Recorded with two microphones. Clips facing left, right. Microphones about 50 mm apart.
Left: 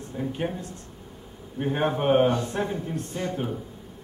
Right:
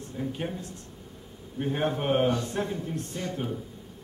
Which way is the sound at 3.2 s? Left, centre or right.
Left.